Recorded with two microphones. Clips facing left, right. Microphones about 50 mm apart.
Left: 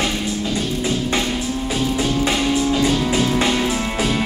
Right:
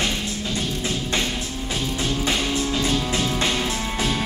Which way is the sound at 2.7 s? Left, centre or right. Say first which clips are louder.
Left 5 dB; left.